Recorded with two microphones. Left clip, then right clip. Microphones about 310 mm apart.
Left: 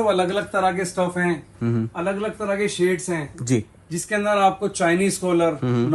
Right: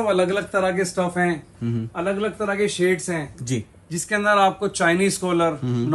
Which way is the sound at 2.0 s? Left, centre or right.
Left.